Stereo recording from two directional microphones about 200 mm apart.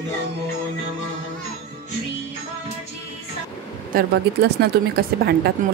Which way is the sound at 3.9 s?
50° right (ahead or behind).